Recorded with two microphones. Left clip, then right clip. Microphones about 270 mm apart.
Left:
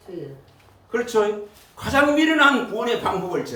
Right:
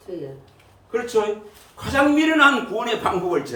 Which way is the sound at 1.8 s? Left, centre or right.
Centre.